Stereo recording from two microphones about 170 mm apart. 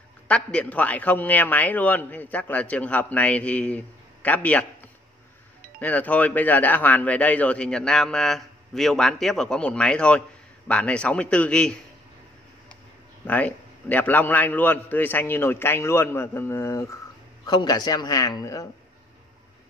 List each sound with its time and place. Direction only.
0.3 s speech: 5° left (ahead or behind)
5.8 s speech: 10° left (ahead or behind)
13.3 s a man's voice: 10° left (ahead or behind)